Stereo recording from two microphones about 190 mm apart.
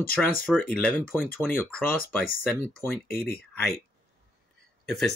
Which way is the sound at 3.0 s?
50° left (ahead or behind).